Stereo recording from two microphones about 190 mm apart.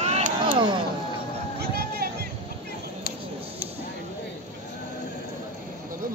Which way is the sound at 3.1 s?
50° left (ahead or behind).